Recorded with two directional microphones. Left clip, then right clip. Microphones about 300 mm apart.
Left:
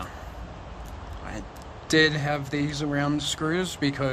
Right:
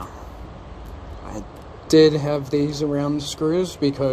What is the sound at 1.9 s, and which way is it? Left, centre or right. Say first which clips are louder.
Speech: right 7 dB; centre.